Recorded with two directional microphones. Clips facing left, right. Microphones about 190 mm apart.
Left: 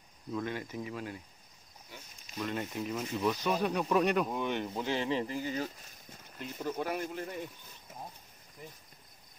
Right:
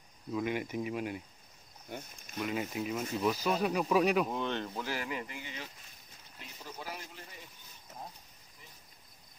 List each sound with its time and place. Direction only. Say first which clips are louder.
0.3 s speech: right 3 dB; 10° right (ahead or behind)
1.9 s speech: right 9 dB; 55° right (ahead or behind)
2.3 s speech: right 1 dB; 5° right (ahead or behind)
4.4 s speech: left 2 dB; 15° left (ahead or behind); by 5.7 s 40° left (ahead or behind)
6.3 s speech: left 11 dB; 50° left (ahead or behind)